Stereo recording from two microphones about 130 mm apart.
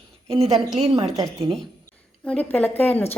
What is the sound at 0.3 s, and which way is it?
Speech, 50° right (ahead or behind).